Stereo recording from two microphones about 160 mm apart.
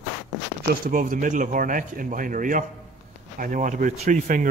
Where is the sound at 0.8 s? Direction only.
55° right (ahead or behind).